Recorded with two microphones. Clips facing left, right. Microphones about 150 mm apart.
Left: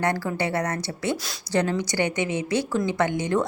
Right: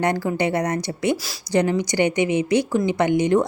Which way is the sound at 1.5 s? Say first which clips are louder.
Right 4 dB; 15° right (ahead or behind).